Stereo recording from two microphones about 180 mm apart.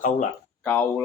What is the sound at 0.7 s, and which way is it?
Speech, 10° left (ahead or behind).